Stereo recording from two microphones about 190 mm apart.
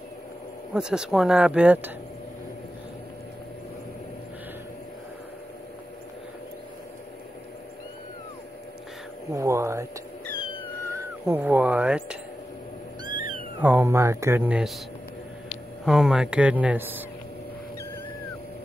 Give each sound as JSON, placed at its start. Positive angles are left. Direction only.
{"t": 0.7, "sound": "speech", "side_deg": -5}
{"t": 9.3, "sound": "speech", "side_deg": -15}
{"t": 10.9, "sound": "music", "side_deg": -15}
{"t": 13.6, "sound": "speech", "side_deg": -10}
{"t": 15.8, "sound": "speech", "side_deg": -5}